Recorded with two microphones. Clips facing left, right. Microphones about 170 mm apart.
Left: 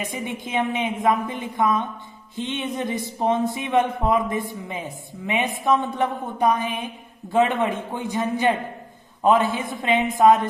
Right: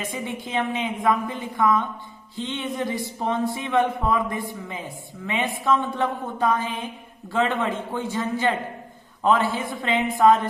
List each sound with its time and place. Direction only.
0.0 s a man's voice: 20° left (ahead or behind)